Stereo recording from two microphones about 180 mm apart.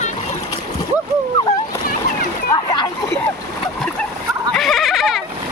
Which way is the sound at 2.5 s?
25° left (ahead or behind).